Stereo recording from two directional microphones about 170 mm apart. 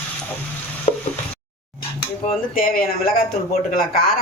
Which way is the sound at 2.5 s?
55° left (ahead or behind).